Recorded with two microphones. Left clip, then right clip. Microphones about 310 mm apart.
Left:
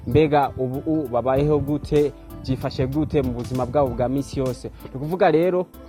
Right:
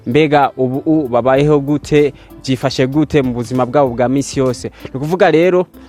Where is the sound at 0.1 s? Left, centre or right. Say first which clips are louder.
Right 7 dB; right.